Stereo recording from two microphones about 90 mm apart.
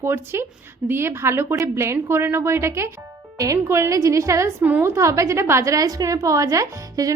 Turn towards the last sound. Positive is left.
turn(degrees=-40)  # may be behind; listen again after turning